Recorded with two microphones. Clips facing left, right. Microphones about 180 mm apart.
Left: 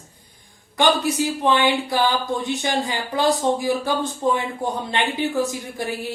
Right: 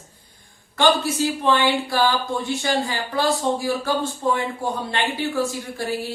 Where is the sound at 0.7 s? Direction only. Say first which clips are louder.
Even; 15° left (ahead or behind).